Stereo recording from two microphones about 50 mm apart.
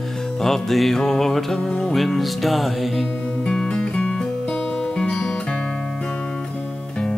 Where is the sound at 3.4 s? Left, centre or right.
Centre.